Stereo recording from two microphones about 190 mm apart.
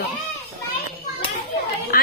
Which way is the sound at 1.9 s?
50° left (ahead or behind).